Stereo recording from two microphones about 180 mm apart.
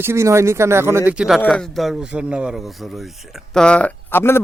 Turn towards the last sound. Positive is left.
turn(degrees=15)  # may be behind; listen again after turning